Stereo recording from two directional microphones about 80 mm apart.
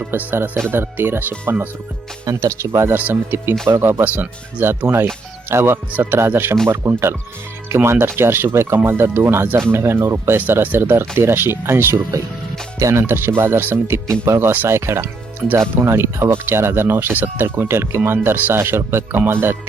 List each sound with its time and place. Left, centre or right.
0.1 s speech: right
2.3 s speech: right